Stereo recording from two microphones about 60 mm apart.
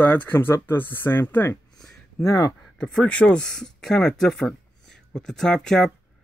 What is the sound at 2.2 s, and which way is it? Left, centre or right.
Speech, left.